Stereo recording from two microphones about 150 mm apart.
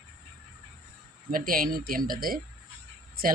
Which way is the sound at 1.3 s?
70° right (ahead or behind).